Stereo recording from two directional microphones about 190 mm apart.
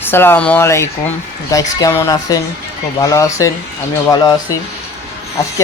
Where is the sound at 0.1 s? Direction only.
10° left (ahead or behind).